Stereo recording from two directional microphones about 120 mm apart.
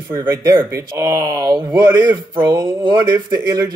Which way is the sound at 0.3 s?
25° right (ahead or behind).